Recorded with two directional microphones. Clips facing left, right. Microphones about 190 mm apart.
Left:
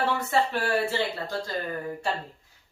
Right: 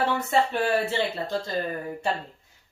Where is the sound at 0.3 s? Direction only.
20° right (ahead or behind).